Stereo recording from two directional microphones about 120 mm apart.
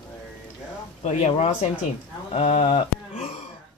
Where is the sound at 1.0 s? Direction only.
65° left (ahead or behind).